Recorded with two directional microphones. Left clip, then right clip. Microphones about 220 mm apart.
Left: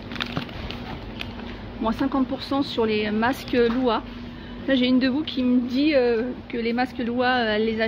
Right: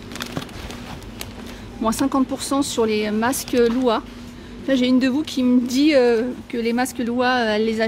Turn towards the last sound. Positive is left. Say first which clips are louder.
# right 3 dB
turn(degrees=-20)  # may be behind; listen again after turning